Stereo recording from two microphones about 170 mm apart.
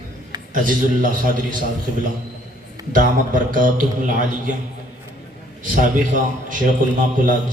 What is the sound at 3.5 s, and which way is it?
A man's voice, 50° right (ahead or behind).